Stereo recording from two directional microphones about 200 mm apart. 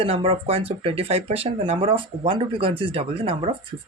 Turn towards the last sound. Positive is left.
turn(degrees=-30)  # may be behind; listen again after turning